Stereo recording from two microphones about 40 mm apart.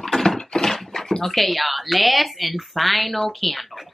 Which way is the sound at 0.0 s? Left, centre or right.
Centre.